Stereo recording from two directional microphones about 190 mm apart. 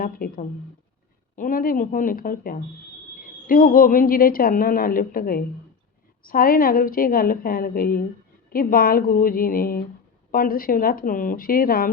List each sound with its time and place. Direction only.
0.0 s a woman's voice: 50° left (ahead or behind)